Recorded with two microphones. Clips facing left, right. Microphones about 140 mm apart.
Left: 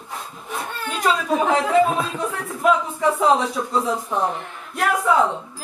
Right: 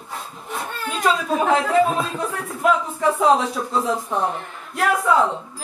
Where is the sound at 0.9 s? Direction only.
Centre (ahead or behind).